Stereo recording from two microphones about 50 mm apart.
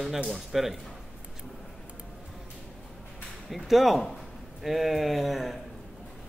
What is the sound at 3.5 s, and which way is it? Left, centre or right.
Speech, centre.